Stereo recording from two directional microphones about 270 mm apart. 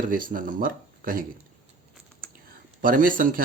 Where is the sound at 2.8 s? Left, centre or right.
Right.